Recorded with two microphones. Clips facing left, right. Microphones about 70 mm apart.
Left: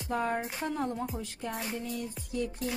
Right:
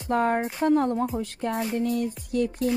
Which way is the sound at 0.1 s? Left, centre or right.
Right.